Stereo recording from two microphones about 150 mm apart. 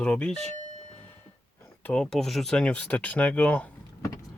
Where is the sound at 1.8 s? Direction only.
10° left (ahead or behind).